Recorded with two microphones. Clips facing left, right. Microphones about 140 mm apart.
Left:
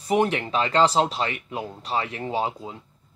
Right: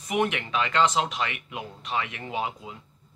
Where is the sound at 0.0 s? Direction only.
35° left (ahead or behind).